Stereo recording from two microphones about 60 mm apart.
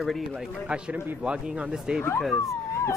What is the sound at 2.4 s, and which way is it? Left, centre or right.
Dog, left.